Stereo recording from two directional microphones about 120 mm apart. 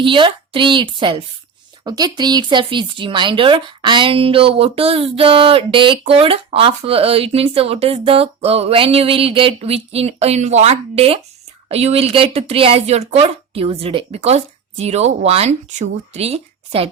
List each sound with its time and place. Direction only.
0.0 s speech: 45° right (ahead or behind)